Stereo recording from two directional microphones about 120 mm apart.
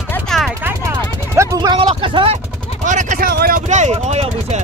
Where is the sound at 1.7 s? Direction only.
45° right (ahead or behind).